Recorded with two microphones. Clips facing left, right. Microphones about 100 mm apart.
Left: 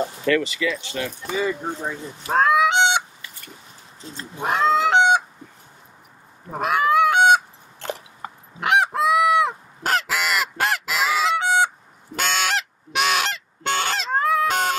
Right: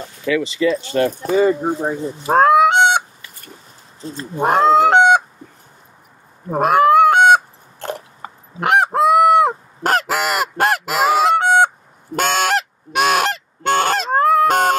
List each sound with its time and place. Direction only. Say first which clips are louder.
0.3 s speech: right 2 dB; 5° right (ahead or behind)
0.6 s speech: right 9 dB; 40° right (ahead or behind)
1.8 s goose: right 8 dB; 35° right (ahead or behind)
4.0 s speech: right 9 dB; 40° right (ahead or behind)
4.4 s goose: right 7 dB; 45° right (ahead or behind)
6.5 s fowl: right 7 dB; 45° right (ahead or behind)
8.5 s goose: right 5 dB; 45° right (ahead or behind)